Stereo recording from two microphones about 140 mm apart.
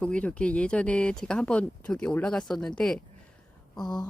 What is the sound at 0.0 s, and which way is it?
Speech, 10° left (ahead or behind).